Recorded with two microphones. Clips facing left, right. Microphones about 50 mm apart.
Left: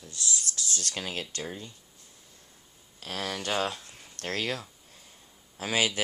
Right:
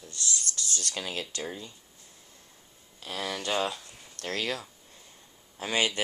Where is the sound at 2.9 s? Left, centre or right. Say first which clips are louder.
Even; left.